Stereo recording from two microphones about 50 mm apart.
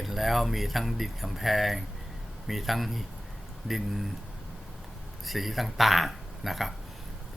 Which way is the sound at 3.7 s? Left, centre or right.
Centre.